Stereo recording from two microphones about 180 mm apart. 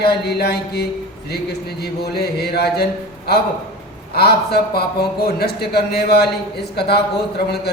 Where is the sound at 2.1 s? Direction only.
65° left (ahead or behind).